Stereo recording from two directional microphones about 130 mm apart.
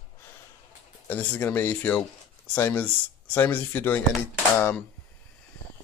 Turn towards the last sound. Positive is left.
turn(degrees=15)  # may be behind; listen again after turning